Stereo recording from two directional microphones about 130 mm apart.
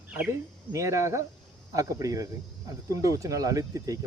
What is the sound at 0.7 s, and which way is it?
Speech, 25° right (ahead or behind).